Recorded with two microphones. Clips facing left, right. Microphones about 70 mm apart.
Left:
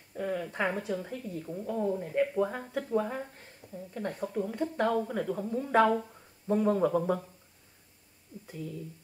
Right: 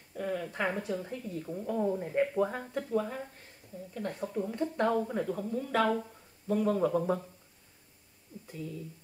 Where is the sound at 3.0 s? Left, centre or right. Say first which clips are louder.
Left 2 dB; left.